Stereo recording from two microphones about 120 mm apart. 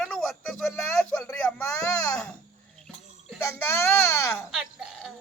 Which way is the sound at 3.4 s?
20° left (ahead or behind).